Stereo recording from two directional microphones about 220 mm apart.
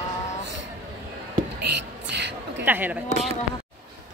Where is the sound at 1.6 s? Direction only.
50° right (ahead or behind).